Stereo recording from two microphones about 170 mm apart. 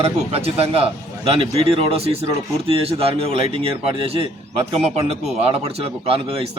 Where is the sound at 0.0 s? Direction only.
35° right (ahead or behind).